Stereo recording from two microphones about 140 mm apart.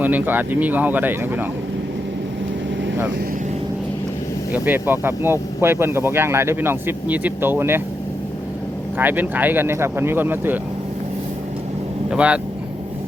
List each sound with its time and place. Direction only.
0.0 s speech: 10° right (ahead or behind)
4.5 s speech: 15° right (ahead or behind)
9.0 s speech: 15° right (ahead or behind)
12.1 s speech: 10° right (ahead or behind)